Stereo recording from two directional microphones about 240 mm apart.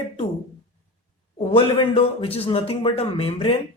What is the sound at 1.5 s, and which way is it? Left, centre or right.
A man's voice, left.